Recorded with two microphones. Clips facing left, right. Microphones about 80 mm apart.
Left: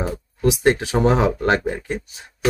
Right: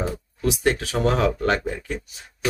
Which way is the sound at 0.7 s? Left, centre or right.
Left.